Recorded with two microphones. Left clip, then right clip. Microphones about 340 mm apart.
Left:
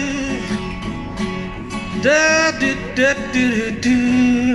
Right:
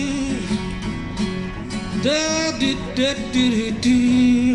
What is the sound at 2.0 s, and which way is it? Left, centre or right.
Music, centre.